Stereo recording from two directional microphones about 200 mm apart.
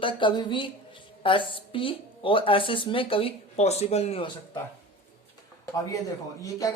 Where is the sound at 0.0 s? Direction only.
25° left (ahead or behind).